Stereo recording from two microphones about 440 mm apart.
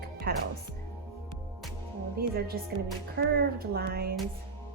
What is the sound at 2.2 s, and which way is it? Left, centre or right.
A woman's voice, centre.